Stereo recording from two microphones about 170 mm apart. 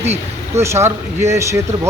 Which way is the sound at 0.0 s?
40° right (ahead or behind).